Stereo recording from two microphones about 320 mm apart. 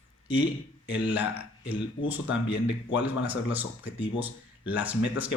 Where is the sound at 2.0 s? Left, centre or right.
Left.